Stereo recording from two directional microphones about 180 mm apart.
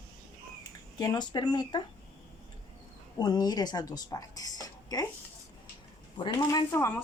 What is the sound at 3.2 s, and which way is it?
Speech, 20° left (ahead or behind).